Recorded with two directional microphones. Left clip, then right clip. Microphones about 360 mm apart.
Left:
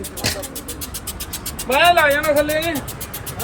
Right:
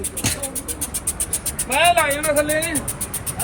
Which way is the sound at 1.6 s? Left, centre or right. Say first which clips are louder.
Left 3 dB; left.